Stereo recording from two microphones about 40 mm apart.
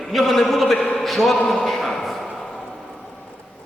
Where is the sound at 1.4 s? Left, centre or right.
Centre.